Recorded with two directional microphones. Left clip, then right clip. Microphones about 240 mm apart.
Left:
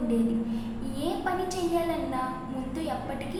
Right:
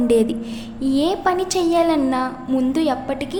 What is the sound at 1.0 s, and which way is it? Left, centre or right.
A woman's voice, right.